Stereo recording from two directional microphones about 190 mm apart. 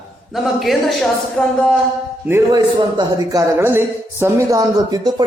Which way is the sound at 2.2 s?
10° right (ahead or behind).